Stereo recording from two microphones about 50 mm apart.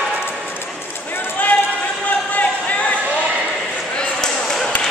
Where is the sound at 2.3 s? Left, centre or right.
Left.